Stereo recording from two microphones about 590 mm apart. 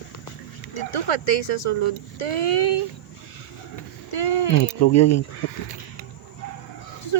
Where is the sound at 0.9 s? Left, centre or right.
Left.